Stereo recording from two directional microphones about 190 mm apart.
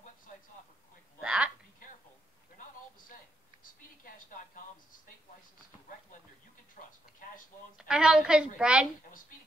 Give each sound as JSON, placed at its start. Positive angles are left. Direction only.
{"t": 1.2, "sound": "a woman's voice", "side_deg": -5}
{"t": 1.8, "sound": "a sound", "side_deg": 45}
{"t": 6.8, "sound": "speech", "side_deg": 40}
{"t": 7.7, "sound": "a woman's voice", "side_deg": -5}